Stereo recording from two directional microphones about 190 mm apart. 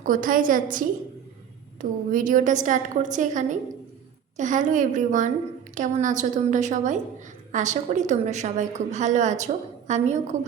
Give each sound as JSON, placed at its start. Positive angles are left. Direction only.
{"t": 0.0, "sound": "a woman's voice", "side_deg": -45}